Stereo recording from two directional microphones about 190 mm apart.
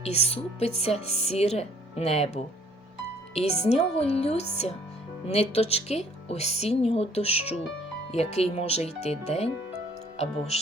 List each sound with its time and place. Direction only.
0.0 s a woman's voice: 35° left (ahead or behind)